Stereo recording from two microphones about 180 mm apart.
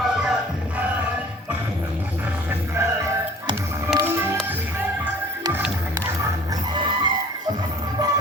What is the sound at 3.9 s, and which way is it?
Music, 15° right (ahead or behind).